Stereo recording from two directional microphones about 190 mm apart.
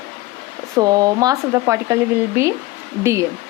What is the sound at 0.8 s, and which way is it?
Speech, 20° right (ahead or behind).